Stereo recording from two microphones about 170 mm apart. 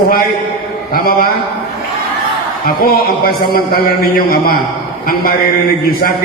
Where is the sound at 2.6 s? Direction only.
65° left (ahead or behind).